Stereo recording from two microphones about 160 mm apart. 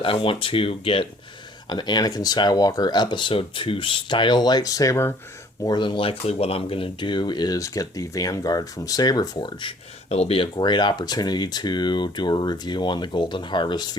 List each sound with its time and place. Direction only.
0.0 s speech: 35° left (ahead or behind)